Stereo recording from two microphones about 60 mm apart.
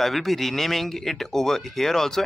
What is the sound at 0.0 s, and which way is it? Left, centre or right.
Speech, centre.